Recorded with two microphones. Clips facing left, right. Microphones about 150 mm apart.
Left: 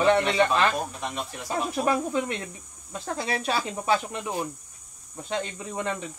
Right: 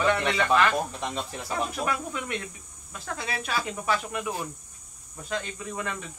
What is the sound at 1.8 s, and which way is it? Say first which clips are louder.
Speech: left 6 dB; 30° left (ahead or behind).